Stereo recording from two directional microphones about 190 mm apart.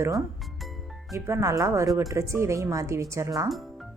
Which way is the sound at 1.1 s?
15° right (ahead or behind).